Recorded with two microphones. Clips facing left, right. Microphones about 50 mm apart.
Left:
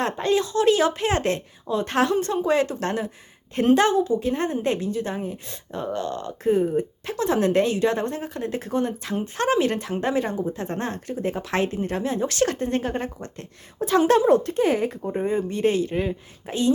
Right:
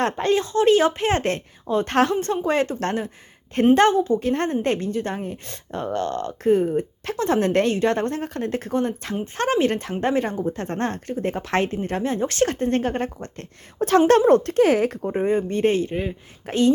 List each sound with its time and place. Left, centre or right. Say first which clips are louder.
0.0 s speech: right 1 dB; right
3.8 s a woman's voice: right 2 dB; right
15.3 s a woman's voice: right 2 dB; right
15.9 s speech: left 1 dB; centre
16.5 s a woman's voice: right 3 dB; right